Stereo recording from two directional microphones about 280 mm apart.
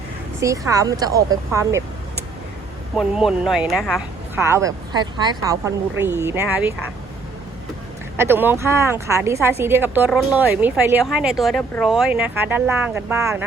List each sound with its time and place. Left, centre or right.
0.3 s a woman's voice: centre
2.9 s a woman's voice: centre
8.1 s a woman's voice: centre